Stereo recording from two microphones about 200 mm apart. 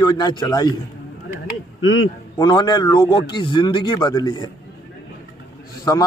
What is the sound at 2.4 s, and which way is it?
A man's voice, 20° left (ahead or behind).